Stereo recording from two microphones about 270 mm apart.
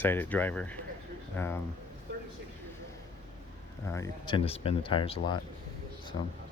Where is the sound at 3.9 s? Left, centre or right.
Centre.